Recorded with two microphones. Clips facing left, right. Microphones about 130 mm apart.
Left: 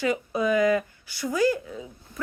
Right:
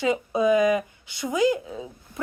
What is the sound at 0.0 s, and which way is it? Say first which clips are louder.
Speech: right 3 dB; 20° right (ahead or behind).